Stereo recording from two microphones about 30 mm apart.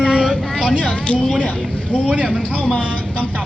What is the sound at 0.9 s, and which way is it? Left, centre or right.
Speech, left.